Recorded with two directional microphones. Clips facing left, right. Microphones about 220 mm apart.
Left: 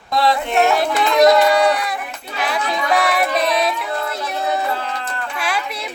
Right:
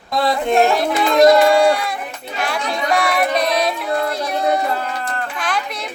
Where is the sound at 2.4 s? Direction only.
Centre (ahead or behind).